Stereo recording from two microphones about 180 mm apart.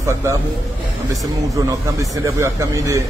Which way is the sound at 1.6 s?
15° right (ahead or behind).